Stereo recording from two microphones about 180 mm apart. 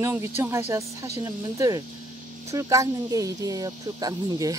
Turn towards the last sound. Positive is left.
turn(degrees=-20)  # may be behind; listen again after turning